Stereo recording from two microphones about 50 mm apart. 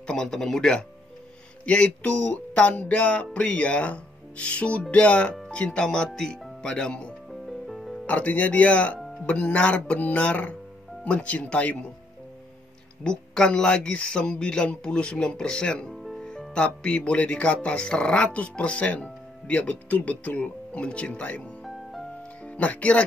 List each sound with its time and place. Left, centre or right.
0.0 s speech: centre
1.7 s speech: left
7.4 s music: centre
8.1 s speech: left
13.0 s speech: centre
15.9 s music: centre
16.3 s speech: centre